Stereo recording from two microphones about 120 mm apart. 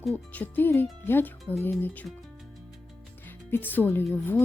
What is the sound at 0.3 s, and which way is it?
Speech, 15° left (ahead or behind).